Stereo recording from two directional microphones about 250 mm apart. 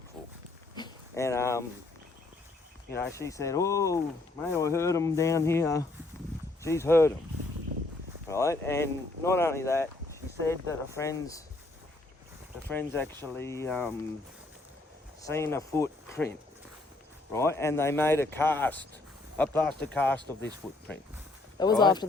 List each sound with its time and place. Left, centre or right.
0.8 s a sound: centre
3.2 s speech: centre
8.3 s speech: centre
12.6 s speech: centre
15.2 s speech: centre
17.3 s speech: centre
21.6 s speech: centre